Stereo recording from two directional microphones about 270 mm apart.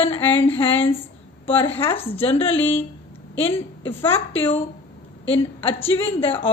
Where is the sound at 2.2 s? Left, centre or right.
Left.